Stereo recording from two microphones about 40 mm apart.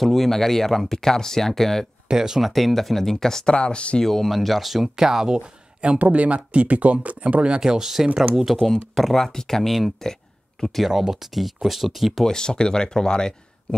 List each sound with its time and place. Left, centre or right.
0.0 s speech: centre
2.0 s speech: centre
2.5 s speech: centre
3.5 s speech: left
4.0 s speech: centre
5.4 s a sound: right
5.9 s speech: right
7.6 s speech: centre
8.5 s speech: centre
10.9 s speech: centre
12.3 s speech: centre